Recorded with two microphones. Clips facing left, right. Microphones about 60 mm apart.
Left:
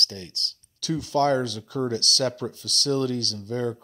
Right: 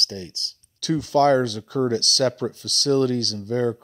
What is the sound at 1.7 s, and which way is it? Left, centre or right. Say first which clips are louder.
Speech: right 3 dB; right.